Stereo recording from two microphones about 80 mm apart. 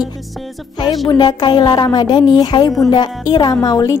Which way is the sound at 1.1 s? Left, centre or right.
Left.